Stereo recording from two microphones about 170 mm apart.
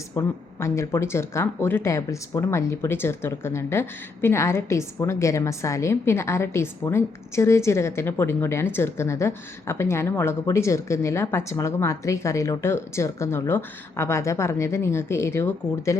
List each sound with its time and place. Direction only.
0.1 s speech: 15° left (ahead or behind)